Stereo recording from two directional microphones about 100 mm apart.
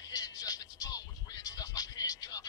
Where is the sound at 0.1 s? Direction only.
40° left (ahead or behind).